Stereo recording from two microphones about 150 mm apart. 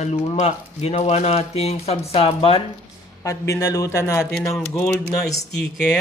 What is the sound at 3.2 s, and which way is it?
Speech, 20° left (ahead or behind).